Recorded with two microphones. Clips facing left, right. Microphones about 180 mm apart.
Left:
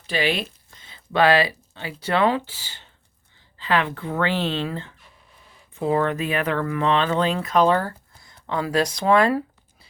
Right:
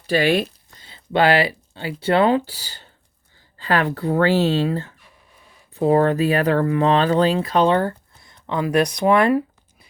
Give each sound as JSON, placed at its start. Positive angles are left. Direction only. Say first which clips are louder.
{"t": 0.1, "sound": "speech", "louder": "right 6 dB", "side_deg": -50}
{"t": 0.8, "sound": "speech", "louder": "right 1 dB", "side_deg": -30}